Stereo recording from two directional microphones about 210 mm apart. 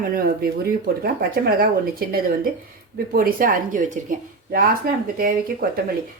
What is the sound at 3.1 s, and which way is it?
Speech, 45° right (ahead or behind).